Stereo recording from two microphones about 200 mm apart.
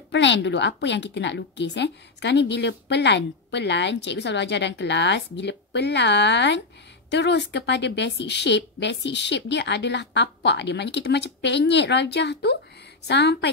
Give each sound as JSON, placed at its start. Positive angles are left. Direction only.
{"t": 0.1, "sound": "a woman's voice", "side_deg": 65}